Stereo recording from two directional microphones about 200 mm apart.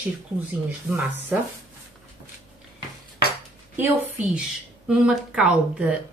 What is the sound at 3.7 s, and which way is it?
Speech, 10° right (ahead or behind).